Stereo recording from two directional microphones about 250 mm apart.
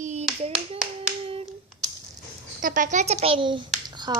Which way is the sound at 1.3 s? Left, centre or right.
Right.